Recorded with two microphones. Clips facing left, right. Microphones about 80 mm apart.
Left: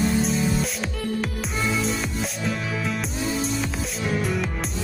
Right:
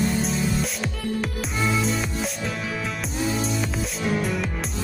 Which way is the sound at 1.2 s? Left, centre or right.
Centre.